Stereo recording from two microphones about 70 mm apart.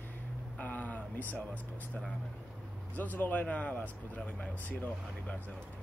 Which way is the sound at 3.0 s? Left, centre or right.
Left.